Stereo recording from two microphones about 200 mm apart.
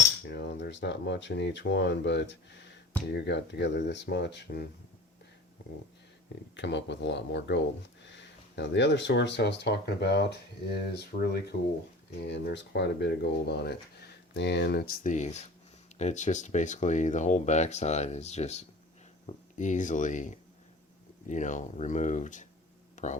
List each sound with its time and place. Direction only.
0.3 s speech: 60° left (ahead or behind)
6.6 s speech: 60° left (ahead or behind); by 23.1 s 40° left (ahead or behind)